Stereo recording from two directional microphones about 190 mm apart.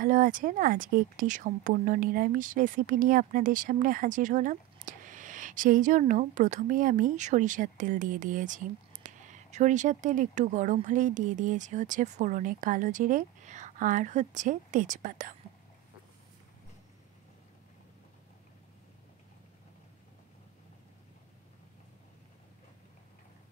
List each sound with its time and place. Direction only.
0.0 s speech: 45° right (ahead or behind)